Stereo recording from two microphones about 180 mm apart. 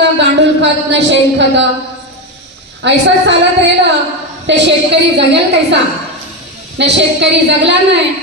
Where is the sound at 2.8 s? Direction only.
75° right (ahead or behind).